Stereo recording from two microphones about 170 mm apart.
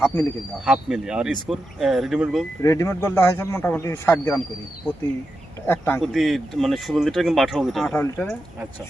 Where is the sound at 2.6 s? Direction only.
15° left (ahead or behind).